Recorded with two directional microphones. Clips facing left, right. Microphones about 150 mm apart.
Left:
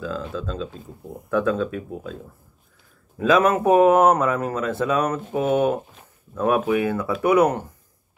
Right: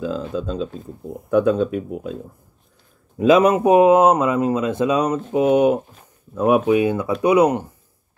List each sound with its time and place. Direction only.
0.0 s speech: 20° right (ahead or behind)
3.2 s speech: 20° right (ahead or behind)